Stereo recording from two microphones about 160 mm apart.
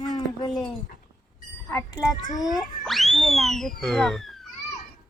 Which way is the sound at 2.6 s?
Centre (ahead or behind).